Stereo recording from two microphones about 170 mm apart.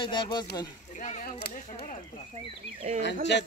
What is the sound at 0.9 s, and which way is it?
A child's voice, 45° left (ahead or behind).